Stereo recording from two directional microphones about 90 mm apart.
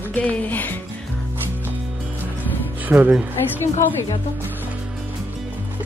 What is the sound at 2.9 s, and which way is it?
Speech, 20° right (ahead or behind).